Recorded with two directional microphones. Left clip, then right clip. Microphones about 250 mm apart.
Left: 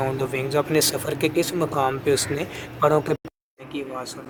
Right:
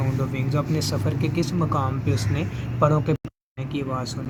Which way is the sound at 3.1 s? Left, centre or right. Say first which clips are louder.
Left 1 dB; left.